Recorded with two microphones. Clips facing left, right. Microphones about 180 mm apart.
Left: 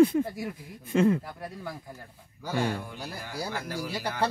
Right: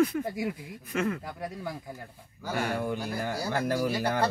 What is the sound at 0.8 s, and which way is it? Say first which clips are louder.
Speech: left 7 dB; 30° left (ahead or behind).